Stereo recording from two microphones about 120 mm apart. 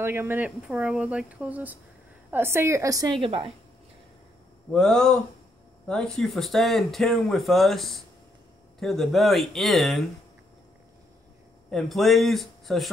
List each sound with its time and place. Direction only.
0.0 s speech: 20° right (ahead or behind)
0.7 s a woman's voice: 5° right (ahead or behind); by 3.2 s 30° right (ahead or behind)
3.2 s a woman's voice: 50° right (ahead or behind)
4.7 s speech: 5° left (ahead or behind)
11.7 s speech: centre (ahead or behind)